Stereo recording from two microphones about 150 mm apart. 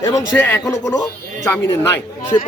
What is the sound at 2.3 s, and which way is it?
Speech, 30° left (ahead or behind).